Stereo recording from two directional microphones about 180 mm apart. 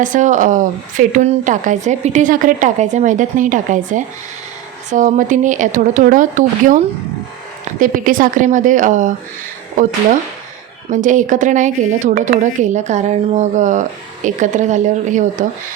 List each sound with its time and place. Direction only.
0.0 s a woman's voice: 45° right (ahead or behind)
7.8 s a woman's voice: 50° right (ahead or behind)
10.8 s a woman's voice: 45° right (ahead or behind)